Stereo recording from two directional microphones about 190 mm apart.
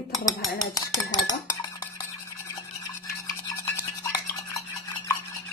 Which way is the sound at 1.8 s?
20° left (ahead or behind).